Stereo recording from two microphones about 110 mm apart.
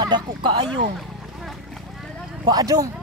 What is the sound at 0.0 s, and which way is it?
Speech, 40° right (ahead or behind).